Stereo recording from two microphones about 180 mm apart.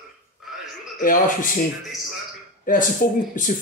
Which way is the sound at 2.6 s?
50° left (ahead or behind).